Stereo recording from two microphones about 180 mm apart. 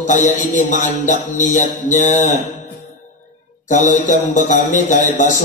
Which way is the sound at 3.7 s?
45° left (ahead or behind).